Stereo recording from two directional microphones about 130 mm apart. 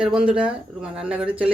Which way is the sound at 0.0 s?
5° right (ahead or behind).